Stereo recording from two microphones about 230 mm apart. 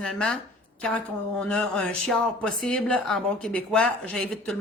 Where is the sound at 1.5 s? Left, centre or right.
Centre.